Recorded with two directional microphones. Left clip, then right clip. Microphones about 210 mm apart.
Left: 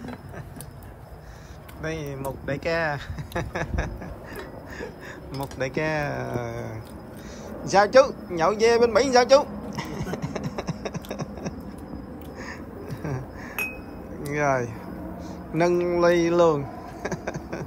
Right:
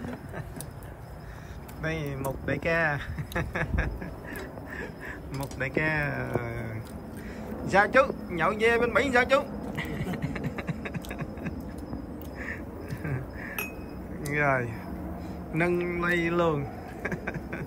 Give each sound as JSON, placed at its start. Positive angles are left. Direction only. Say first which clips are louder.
{"t": 1.8, "sound": "speech", "louder": "left 1 dB", "side_deg": 10}
{"t": 5.6, "sound": "speech", "louder": "left 2 dB", "side_deg": 15}
{"t": 7.7, "sound": "a sound", "louder": "left 5 dB", "side_deg": 15}
{"t": 13.0, "sound": "a sound", "louder": "left 2 dB", "side_deg": 10}
{"t": 14.3, "sound": "speech", "louder": "left 2 dB", "side_deg": 15}
{"t": 15.5, "sound": "vehicle", "louder": "left 6 dB", "side_deg": 15}